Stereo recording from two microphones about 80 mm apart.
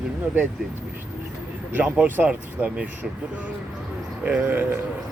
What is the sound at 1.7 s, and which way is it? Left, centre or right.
Speech, right.